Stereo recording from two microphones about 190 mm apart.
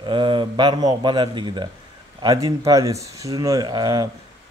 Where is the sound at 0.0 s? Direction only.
25° right (ahead or behind).